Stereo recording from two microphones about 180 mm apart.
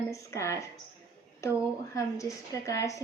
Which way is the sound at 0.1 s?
15° left (ahead or behind).